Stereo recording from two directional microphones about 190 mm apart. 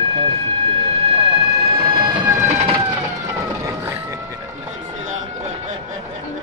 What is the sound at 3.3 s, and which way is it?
Vehicle, 10° right (ahead or behind).